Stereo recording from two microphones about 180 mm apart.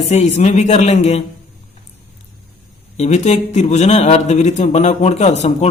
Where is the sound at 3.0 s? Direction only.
40° left (ahead or behind).